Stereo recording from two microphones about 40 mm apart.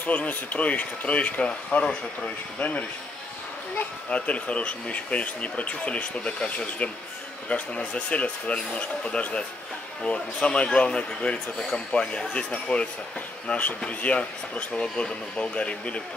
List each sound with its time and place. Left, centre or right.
0.0 s speech: left
4.1 s speech: left
13.5 s speech: left